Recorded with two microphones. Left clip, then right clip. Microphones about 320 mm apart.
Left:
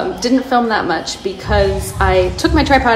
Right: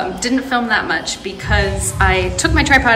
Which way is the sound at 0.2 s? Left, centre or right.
Centre.